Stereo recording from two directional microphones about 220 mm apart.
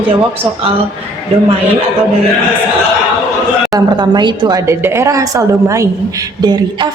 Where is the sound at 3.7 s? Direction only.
20° right (ahead or behind).